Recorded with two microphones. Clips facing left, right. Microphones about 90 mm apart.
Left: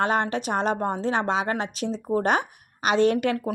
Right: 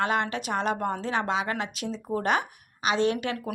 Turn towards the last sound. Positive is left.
turn(degrees=40)  # may be behind; listen again after turning